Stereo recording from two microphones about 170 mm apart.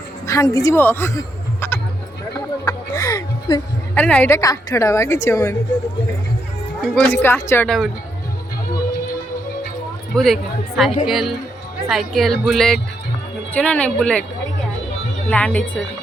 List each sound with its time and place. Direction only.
0.3 s a woman's voice: 20° left (ahead or behind)
1.6 s music: 15° left (ahead or behind)
3.9 s a woman's voice: 10° left (ahead or behind)
6.8 s a woman's voice: 5° left (ahead or behind)
10.2 s a woman's voice: centre (ahead or behind)
15.3 s a woman's voice: 10° left (ahead or behind)